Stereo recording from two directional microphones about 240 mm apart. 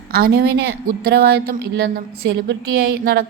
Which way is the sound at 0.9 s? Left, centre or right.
Right.